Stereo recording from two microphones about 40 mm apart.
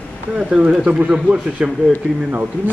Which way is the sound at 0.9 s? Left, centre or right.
Right.